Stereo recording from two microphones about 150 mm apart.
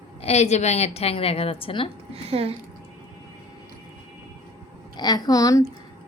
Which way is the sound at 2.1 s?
40° right (ahead or behind).